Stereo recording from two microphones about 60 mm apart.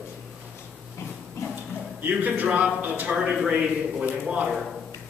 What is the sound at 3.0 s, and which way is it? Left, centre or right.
A man's voice, centre.